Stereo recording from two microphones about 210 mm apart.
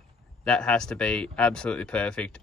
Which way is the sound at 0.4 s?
5° left (ahead or behind).